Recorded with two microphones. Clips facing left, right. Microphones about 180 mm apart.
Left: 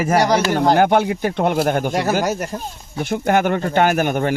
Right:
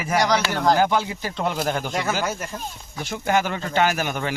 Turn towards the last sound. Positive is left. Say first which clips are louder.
# left 6 dB
turn(degrees=50)  # may be behind; listen again after turning